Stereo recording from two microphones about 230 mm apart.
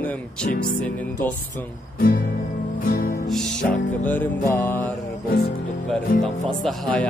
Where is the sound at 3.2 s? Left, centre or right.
Centre.